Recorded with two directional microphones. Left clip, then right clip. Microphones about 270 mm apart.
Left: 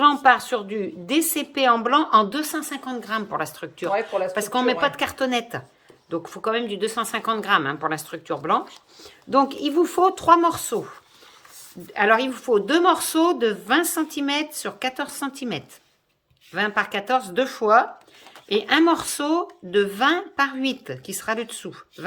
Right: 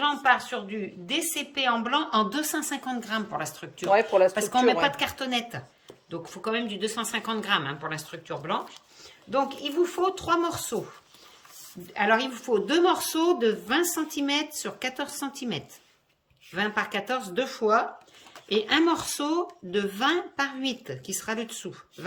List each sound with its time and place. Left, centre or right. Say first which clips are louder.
0.0 s a woman's voice: left 7 dB; centre
3.9 s speech: right 4 dB; right
4.4 s a woman's voice: left 1 dB; centre
11.9 s a woman's voice: left 5 dB; centre